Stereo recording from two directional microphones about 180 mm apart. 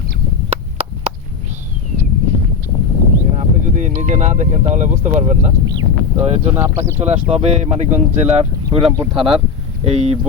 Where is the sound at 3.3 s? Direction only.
45° right (ahead or behind).